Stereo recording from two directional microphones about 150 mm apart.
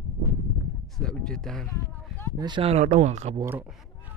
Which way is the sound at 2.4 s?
35° right (ahead or behind).